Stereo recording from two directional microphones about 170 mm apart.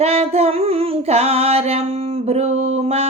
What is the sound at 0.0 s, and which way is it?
Music, 35° right (ahead or behind).